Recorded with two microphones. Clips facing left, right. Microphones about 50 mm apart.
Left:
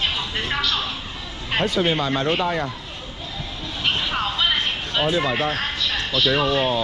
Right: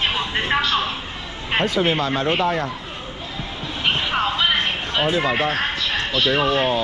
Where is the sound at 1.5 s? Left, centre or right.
Right.